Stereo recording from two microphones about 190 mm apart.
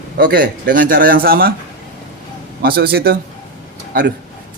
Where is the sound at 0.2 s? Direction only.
50° right (ahead or behind).